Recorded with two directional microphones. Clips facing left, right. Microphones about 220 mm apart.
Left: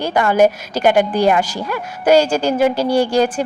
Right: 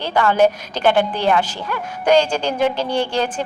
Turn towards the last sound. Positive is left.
turn(degrees=10)  # may be behind; listen again after turning